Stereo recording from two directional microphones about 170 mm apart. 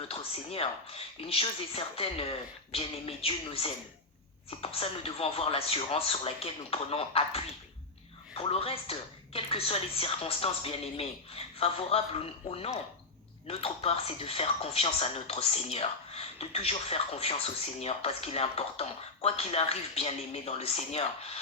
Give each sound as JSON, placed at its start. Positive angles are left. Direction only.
{"t": 0.1, "sound": "speech", "side_deg": 35}